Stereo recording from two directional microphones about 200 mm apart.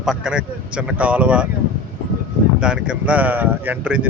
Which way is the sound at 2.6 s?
5° right (ahead or behind).